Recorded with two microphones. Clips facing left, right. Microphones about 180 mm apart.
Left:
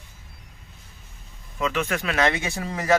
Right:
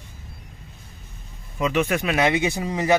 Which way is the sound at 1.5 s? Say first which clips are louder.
Right 4 dB; 20° right (ahead or behind).